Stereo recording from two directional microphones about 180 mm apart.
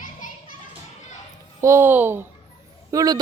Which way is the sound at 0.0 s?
50° left (ahead or behind).